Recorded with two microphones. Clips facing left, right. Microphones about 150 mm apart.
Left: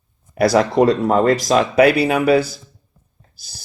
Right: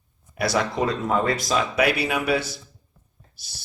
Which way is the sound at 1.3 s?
65° left (ahead or behind).